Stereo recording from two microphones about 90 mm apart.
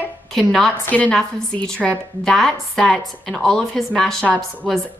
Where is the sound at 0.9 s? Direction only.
20° left (ahead or behind).